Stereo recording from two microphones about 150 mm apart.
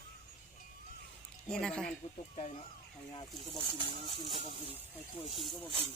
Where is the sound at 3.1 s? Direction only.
35° left (ahead or behind).